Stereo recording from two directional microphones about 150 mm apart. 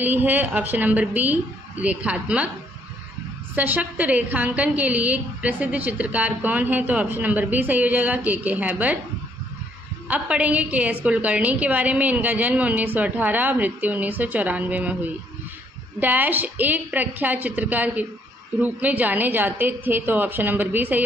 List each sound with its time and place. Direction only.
0.0 s a woman's voice: 10° right (ahead or behind)
3.5 s a woman's voice: 10° right (ahead or behind)
10.0 s a woman's voice: 10° right (ahead or behind)